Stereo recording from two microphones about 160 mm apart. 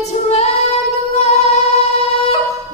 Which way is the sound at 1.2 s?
45° left (ahead or behind).